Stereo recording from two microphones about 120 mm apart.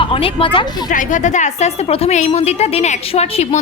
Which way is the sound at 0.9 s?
90° left.